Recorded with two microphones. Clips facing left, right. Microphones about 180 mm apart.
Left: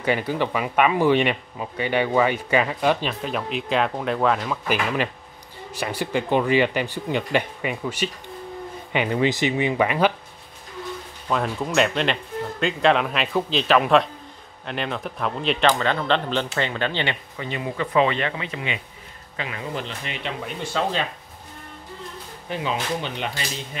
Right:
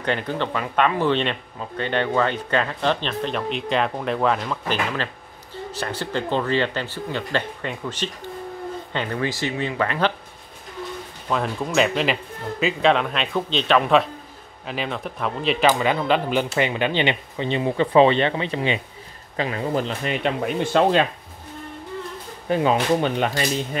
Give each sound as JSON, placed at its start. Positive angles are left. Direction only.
{"t": 0.0, "sound": "speech", "side_deg": 5}
{"t": 11.2, "sound": "speech", "side_deg": 0}
{"t": 22.5, "sound": "speech", "side_deg": -45}